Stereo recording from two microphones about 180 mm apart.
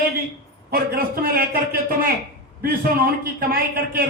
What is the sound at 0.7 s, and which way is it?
Speech, 55° right (ahead or behind).